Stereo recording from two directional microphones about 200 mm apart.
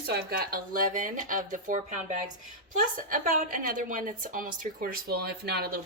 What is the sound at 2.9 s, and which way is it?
A woman's voice, 45° right (ahead or behind).